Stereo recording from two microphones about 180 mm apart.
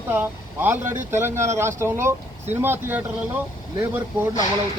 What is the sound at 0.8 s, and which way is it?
Speech, 45° right (ahead or behind).